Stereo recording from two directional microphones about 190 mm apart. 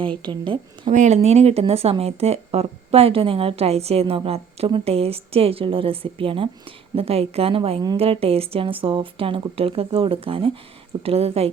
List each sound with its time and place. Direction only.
0.2 s a woman's voice: 25° right (ahead or behind)
0.9 s speech: 35° right (ahead or behind)